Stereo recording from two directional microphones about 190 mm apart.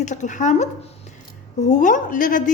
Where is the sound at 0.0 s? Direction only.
40° left (ahead or behind).